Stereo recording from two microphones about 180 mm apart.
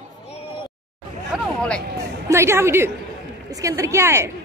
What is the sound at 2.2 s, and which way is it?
A woman's voice, 15° right (ahead or behind).